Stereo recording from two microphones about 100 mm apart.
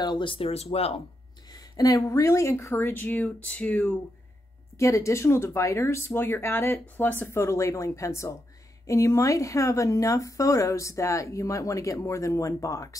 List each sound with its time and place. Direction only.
0.0 s speech: 50° left (ahead or behind); by 0.9 s 90° left
1.5 s speech: 40° left (ahead or behind); by 3.9 s 10° left (ahead or behind)
4.7 s speech: 30° left (ahead or behind)